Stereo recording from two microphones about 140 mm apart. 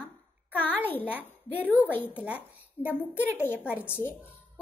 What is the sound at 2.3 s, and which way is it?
A child's voice, 10° right (ahead or behind).